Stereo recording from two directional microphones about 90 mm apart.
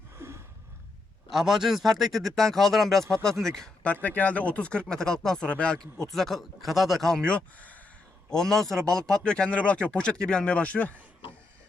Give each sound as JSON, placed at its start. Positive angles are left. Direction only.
{"t": 0.2, "sound": "a sound", "side_deg": -30}
{"t": 1.3, "sound": "speech", "side_deg": -5}
{"t": 3.9, "sound": "speech", "side_deg": 20}
{"t": 8.3, "sound": "speech", "side_deg": 5}